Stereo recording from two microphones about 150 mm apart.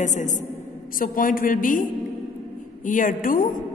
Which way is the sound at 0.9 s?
70° left (ahead or behind).